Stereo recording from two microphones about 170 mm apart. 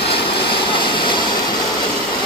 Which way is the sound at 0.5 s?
30° left (ahead or behind).